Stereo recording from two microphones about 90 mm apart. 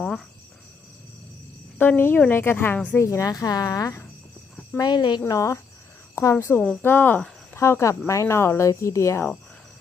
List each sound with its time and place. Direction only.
0.0 s cricket: 5° left (ahead or behind)
1.8 s a woman's voice: 20° left (ahead or behind)
3.0 s speech: 35° left (ahead or behind); by 5.2 s 55° left (ahead or behind)
5.2 s speech: 35° left (ahead or behind)
6.5 s speech: 15° left (ahead or behind)
7.6 s speech: 35° left (ahead or behind)